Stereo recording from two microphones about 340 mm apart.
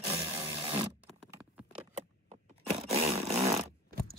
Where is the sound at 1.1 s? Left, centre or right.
Centre.